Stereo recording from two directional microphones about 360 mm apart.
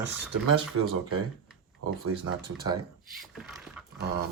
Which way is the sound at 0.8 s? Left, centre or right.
Right.